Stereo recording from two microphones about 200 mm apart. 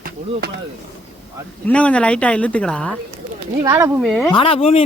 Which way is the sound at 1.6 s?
5° left (ahead or behind).